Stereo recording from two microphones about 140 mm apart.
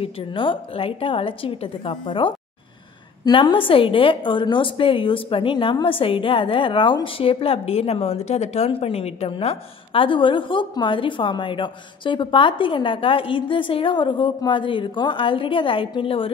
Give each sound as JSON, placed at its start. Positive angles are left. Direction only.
{"t": 0.0, "sound": "a woman's voice", "side_deg": 35}